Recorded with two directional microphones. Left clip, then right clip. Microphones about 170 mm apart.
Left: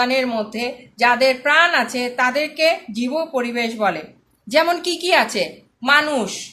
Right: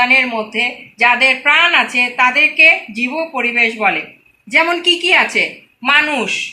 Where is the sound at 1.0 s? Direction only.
55° left (ahead or behind).